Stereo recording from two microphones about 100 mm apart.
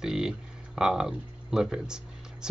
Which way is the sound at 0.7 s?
5° right (ahead or behind).